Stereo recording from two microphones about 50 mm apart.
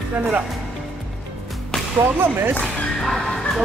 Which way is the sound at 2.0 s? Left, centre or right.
Right.